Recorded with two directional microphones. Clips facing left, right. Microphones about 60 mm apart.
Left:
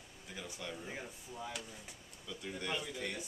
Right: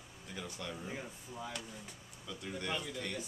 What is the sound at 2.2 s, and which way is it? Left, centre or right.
Speech, centre.